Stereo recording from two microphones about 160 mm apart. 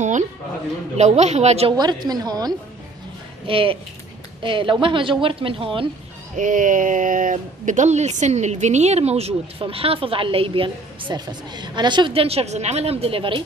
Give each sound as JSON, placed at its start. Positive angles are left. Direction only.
{"t": 0.9, "sound": "a woman's voice", "side_deg": -45}
{"t": 1.8, "sound": "a woman's voice", "side_deg": -25}
{"t": 6.3, "sound": "speech", "side_deg": -55}